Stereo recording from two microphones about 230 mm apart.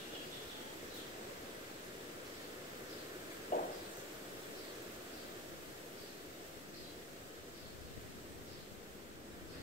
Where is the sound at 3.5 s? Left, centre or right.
Left.